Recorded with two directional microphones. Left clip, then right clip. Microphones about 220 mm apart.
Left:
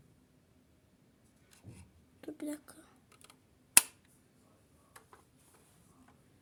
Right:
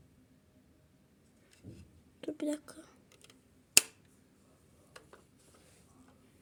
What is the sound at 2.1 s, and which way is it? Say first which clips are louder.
Whispering: right 6 dB; 5° right (ahead or behind).